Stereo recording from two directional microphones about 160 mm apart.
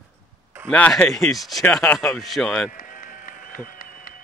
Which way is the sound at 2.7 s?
60° left (ahead or behind).